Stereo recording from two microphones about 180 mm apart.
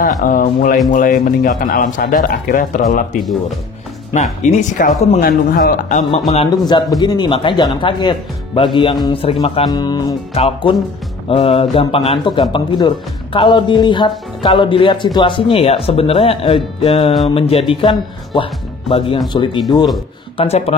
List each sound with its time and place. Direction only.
0.0 s a man's voice: 50° left (ahead or behind)
5.2 s speech: 55° left (ahead or behind)
6.0 s a man's voice: 35° left (ahead or behind)
7.0 s a man's voice: 25° left (ahead or behind)